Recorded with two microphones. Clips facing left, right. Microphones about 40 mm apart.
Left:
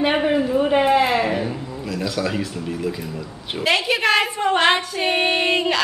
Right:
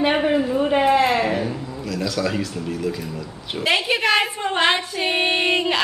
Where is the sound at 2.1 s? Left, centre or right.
Centre.